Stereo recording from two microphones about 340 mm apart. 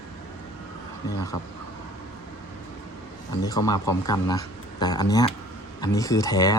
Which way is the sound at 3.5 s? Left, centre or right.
Centre.